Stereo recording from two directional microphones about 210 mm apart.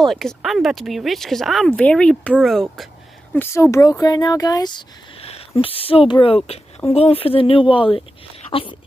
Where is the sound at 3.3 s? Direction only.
10° left (ahead or behind).